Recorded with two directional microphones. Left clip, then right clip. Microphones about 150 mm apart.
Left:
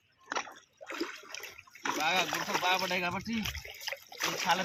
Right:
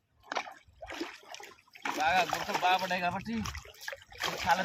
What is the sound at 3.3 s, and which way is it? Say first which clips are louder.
Speech: left 2 dB; 20° right (ahead or behind).